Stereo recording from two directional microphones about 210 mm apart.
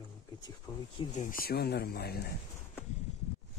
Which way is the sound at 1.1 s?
40° left (ahead or behind).